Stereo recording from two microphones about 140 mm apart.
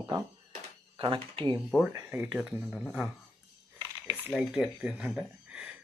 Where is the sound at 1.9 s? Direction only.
20° right (ahead or behind); by 3.1 s 5° right (ahead or behind).